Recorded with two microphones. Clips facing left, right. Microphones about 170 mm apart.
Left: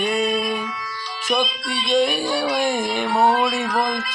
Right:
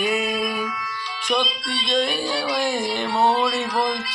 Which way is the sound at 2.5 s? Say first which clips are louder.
Left 2 dB; 55° left (ahead or behind).